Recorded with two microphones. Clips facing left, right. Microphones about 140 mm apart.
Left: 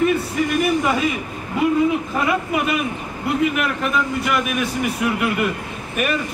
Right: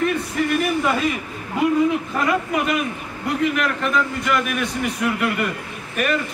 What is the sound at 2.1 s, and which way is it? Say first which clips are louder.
A man's voice: even; 5° left (ahead or behind).